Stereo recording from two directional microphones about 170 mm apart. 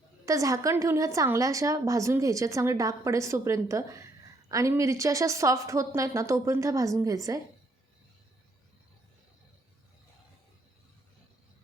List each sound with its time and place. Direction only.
0.3 s a woman's voice: 20° right (ahead or behind)